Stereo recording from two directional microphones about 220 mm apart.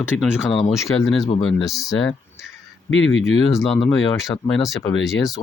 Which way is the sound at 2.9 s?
60° left (ahead or behind).